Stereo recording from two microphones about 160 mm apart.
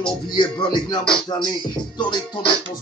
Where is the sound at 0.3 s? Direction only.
30° left (ahead or behind).